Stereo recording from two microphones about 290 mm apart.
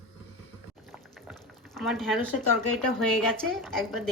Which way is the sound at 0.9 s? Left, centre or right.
Centre.